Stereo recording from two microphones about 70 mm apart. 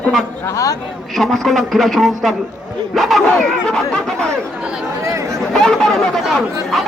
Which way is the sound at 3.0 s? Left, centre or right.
Centre.